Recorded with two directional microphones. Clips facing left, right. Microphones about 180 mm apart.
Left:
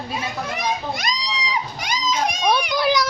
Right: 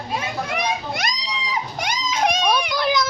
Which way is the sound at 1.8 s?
55° right (ahead or behind).